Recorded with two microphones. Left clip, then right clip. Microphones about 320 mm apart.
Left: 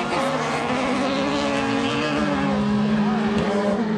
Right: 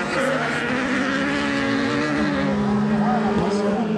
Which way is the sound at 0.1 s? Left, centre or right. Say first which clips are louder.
Right 2 dB; centre.